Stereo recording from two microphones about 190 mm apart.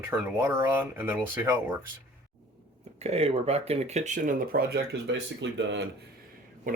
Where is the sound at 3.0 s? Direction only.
35° right (ahead or behind); by 5.9 s 70° right (ahead or behind).